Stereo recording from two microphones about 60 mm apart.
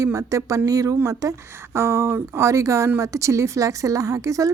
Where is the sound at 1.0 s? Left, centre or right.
Right.